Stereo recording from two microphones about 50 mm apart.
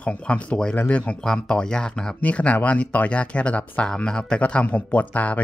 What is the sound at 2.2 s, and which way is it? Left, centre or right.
Speech, left.